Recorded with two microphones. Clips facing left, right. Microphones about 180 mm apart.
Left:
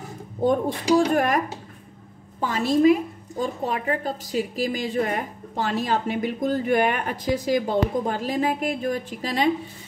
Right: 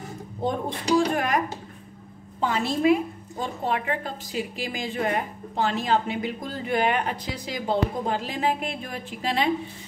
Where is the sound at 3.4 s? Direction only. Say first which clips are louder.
Left 2 dB; 40° left (ahead or behind).